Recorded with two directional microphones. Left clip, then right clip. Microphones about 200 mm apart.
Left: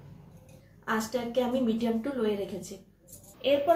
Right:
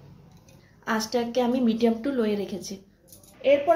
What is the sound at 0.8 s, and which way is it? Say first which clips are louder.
A woman's voice: right 4 dB; 45° right (ahead or behind).